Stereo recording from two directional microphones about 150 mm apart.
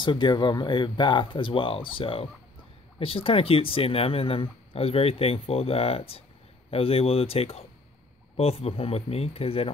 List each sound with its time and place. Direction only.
0.0 s speech: 30° left (ahead or behind)